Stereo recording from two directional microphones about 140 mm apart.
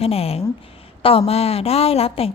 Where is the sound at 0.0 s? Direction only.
45° left (ahead or behind).